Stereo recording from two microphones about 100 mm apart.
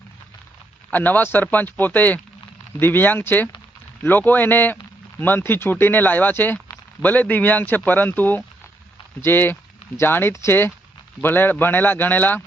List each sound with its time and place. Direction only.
0.9 s speech: 15° left (ahead or behind)